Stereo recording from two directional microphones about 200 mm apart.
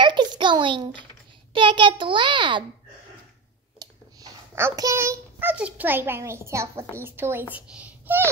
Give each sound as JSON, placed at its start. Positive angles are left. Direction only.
{"t": 0.0, "sound": "a sound", "side_deg": -20}
{"t": 1.5, "sound": "a child's voice", "side_deg": -25}
{"t": 3.8, "sound": "a child's voice", "side_deg": -15}